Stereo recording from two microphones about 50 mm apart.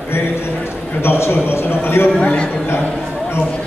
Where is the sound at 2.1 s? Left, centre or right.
Left.